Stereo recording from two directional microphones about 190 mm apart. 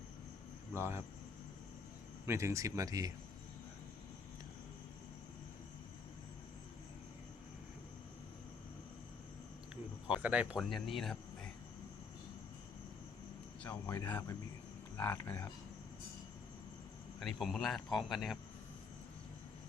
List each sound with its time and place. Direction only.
0.8 s speech: 15° right (ahead or behind)
2.2 s speech: 15° right (ahead or behind)
10.1 s speech: 5° right (ahead or behind)
13.7 s speech: 15° left (ahead or behind)
17.2 s speech: centre (ahead or behind)